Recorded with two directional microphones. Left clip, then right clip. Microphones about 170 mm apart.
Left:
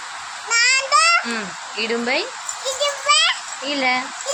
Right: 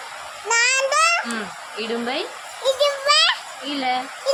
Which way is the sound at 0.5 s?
25° right (ahead or behind).